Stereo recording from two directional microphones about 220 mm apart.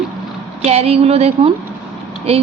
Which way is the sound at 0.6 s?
30° right (ahead or behind).